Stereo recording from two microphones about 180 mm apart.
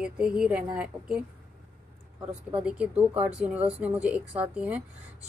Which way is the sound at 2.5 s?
10° right (ahead or behind).